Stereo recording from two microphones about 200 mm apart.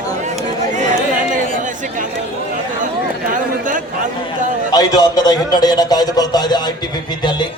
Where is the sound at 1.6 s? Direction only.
40° right (ahead or behind).